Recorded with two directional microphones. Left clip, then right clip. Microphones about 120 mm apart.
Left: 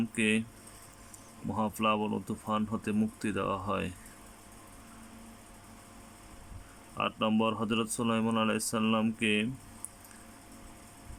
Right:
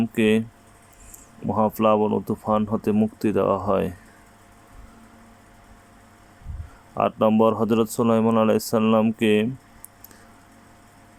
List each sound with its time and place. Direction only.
0.0 s speech: 30° right (ahead or behind)
1.5 s speech: 30° right (ahead or behind)
6.9 s speech: 35° right (ahead or behind)